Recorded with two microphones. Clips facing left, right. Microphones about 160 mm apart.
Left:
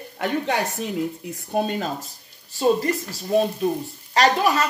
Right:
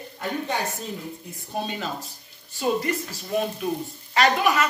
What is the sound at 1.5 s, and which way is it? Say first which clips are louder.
Speech: left 6 dB; 50° left (ahead or behind).